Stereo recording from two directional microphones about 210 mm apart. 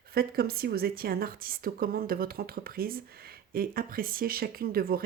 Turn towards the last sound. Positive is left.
turn(degrees=-45)  # may be behind; listen again after turning